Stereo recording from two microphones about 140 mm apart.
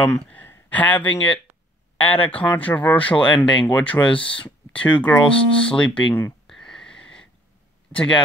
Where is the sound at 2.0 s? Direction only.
40° left (ahead or behind).